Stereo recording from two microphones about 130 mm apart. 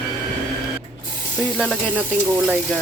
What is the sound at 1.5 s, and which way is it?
Sizzle, 5° left (ahead or behind).